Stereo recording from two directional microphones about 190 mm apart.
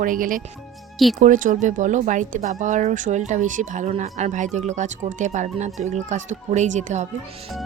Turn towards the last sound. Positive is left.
turn(degrees=-40)  # may be behind; listen again after turning